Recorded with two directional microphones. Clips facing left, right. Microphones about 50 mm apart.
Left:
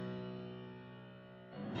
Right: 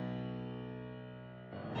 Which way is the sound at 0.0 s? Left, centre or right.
Right.